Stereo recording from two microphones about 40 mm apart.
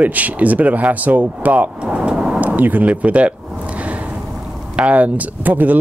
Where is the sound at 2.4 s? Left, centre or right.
Right.